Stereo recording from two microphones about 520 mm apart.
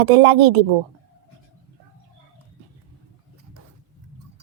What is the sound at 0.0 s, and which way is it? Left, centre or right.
Speech, right.